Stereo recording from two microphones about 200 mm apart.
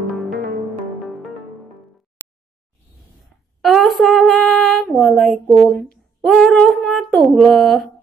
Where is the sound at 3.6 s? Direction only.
Centre (ahead or behind).